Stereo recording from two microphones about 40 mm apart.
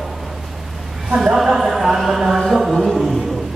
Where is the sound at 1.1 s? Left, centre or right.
Centre.